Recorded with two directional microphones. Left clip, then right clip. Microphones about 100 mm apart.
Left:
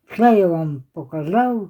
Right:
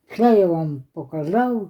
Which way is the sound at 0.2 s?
10° left (ahead or behind).